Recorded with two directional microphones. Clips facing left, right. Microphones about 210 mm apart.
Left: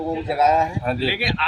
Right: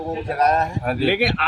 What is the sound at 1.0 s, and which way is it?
Speech, 50° right (ahead or behind).